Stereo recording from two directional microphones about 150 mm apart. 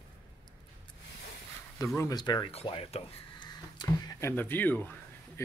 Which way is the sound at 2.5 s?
40° left (ahead or behind).